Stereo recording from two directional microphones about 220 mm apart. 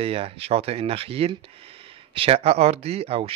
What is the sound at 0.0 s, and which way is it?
A man's voice, 25° right (ahead or behind).